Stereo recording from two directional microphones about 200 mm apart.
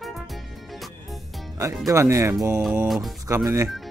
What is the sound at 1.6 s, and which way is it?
Speech, 15° right (ahead or behind).